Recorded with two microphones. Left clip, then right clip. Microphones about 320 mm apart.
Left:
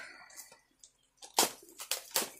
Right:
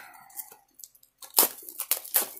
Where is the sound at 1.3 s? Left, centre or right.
Centre.